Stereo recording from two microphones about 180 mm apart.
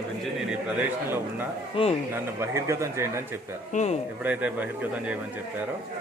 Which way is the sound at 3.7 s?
40° left (ahead or behind).